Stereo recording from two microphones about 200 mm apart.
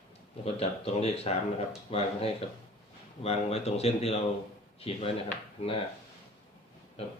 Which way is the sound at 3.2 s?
30° left (ahead or behind).